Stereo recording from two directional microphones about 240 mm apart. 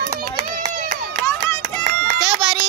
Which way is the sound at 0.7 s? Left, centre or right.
Right.